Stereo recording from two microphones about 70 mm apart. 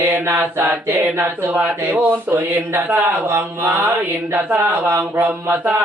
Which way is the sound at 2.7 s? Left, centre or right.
Right.